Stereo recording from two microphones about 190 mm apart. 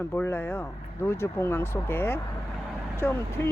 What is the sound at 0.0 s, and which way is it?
Speech, 10° left (ahead or behind).